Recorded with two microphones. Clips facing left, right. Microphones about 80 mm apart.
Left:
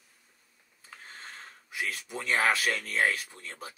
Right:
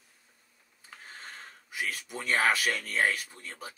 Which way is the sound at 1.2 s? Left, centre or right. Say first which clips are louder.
Even; centre.